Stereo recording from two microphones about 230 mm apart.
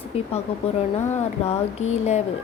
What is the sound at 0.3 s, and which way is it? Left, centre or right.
Speech, left.